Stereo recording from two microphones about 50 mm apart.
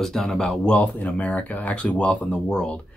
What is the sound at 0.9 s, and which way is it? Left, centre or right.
Speech, left.